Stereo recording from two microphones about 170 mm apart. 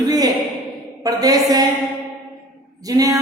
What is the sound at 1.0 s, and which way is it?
Speech, 20° right (ahead or behind).